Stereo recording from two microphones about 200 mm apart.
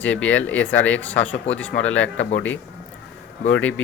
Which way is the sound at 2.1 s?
75° left (ahead or behind).